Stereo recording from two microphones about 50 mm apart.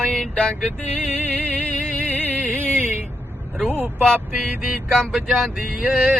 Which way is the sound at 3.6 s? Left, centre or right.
Right.